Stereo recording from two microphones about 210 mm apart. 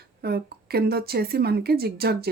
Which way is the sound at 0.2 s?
50° right (ahead or behind).